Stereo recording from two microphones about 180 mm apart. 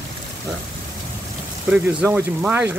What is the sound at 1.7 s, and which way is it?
Speech, 5° right (ahead or behind).